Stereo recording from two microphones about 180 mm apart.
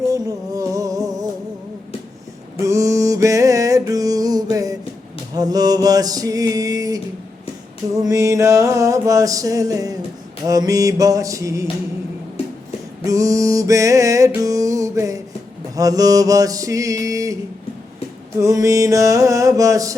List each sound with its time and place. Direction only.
0.1 s music: 20° right (ahead or behind)
2.6 s music: 15° right (ahead or behind)
5.3 s mantra: 20° right (ahead or behind)
7.9 s music: 20° right (ahead or behind)
13.1 s music: 20° right (ahead or behind)
15.7 s mantra: 20° right (ahead or behind)
18.3 s music: 15° right (ahead or behind)